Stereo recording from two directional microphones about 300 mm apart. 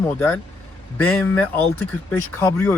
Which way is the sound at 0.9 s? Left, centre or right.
Centre.